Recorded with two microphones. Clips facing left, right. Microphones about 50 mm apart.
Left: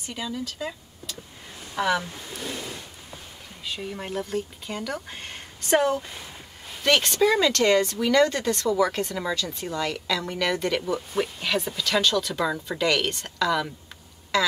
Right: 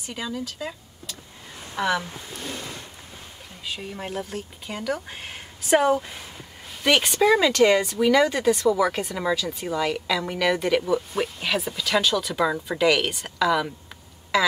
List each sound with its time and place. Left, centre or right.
0.3 s speech: centre
3.6 s speech: centre